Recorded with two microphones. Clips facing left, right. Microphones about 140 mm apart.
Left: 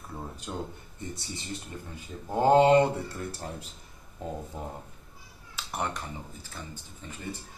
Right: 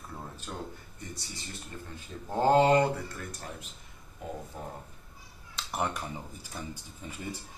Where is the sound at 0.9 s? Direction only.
25° left (ahead or behind).